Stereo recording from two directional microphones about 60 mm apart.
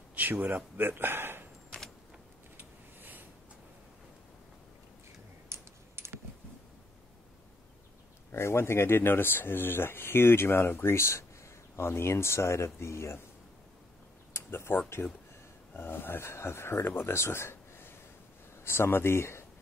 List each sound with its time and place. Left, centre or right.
0.1 s speech: right
2.5 s a sound: right
5.5 s typing: right
8.3 s speech: left
14.3 s tick-tock: left
15.0 s speech: left
15.7 s speech: left